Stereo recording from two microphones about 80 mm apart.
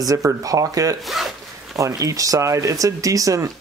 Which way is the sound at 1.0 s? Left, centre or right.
Centre.